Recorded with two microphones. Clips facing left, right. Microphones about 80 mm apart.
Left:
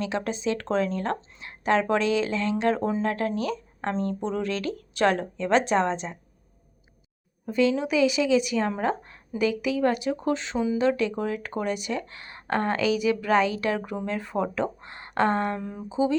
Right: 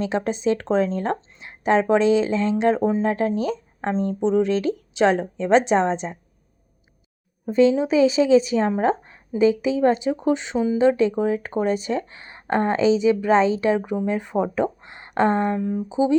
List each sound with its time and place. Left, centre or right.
0.0 s speech: right
7.4 s speech: right
15.5 s speech: centre
15.9 s speech: centre